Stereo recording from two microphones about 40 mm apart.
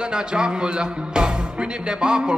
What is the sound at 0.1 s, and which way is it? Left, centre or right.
Speech, right.